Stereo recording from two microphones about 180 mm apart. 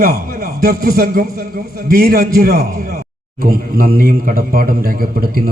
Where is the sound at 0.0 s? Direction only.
55° right (ahead or behind).